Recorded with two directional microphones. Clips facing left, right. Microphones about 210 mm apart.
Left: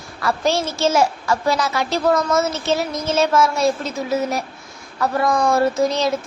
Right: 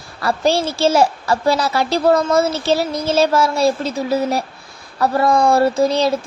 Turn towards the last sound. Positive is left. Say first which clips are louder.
# right 3 dB
turn(degrees=-30)  # may be behind; listen again after turning